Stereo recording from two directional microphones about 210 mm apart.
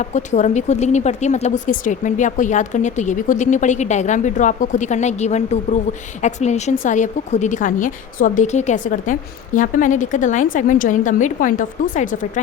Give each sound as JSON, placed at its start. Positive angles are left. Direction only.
{"t": 0.0, "sound": "a woman's voice", "side_deg": 35}